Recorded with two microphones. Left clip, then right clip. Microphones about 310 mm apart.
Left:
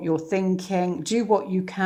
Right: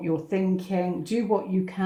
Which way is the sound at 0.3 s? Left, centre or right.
Left.